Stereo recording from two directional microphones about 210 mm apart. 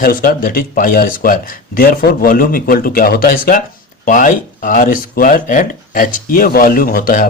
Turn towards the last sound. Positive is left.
turn(degrees=45)  # may be behind; listen again after turning